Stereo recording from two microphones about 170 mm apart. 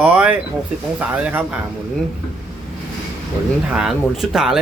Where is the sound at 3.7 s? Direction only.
Centre (ahead or behind).